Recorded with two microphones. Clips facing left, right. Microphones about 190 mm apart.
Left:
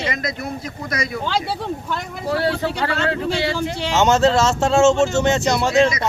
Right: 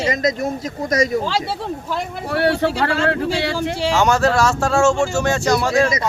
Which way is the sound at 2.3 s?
65° right (ahead or behind).